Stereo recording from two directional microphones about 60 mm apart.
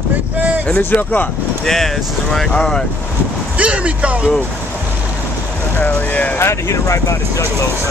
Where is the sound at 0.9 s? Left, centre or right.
Left.